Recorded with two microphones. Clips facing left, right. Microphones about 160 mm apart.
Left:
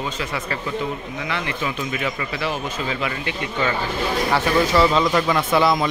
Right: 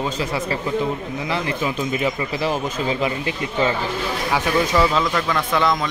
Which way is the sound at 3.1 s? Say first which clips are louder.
Right 2 dB; 25° right (ahead or behind).